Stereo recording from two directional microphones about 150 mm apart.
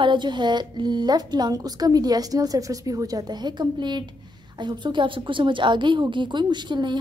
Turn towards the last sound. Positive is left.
turn(degrees=-30)  # may be behind; listen again after turning